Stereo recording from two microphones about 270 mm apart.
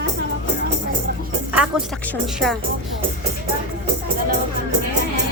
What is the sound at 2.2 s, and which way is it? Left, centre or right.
Speech, centre.